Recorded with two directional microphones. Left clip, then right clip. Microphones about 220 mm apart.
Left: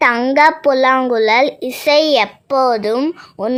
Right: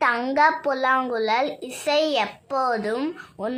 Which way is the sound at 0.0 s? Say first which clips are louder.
Left 8 dB; 30° left (ahead or behind).